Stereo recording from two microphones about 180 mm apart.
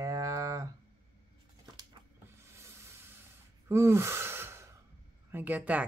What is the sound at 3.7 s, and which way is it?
Sigh, 15° right (ahead or behind).